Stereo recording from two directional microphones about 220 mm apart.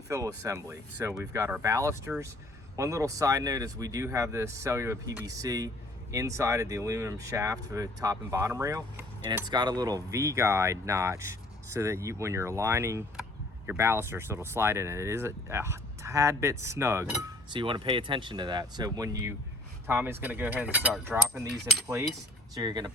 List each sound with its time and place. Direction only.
0.1 s speech: 15° right (ahead or behind)
22.5 s speech: 15° right (ahead or behind)